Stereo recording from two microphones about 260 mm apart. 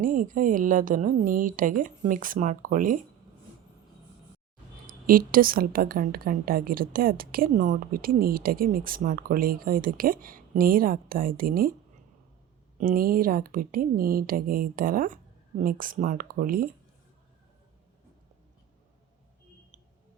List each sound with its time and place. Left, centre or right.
0.0 s a woman's voice: right
4.9 s a woman's voice: right
12.8 s a woman's voice: right